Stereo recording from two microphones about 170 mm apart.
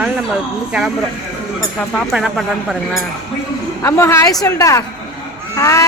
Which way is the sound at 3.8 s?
15° left (ahead or behind).